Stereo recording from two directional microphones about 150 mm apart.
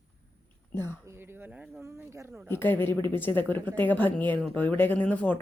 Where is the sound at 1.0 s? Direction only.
15° right (ahead or behind).